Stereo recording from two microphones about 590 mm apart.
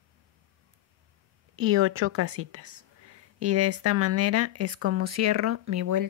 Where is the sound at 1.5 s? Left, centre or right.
Right.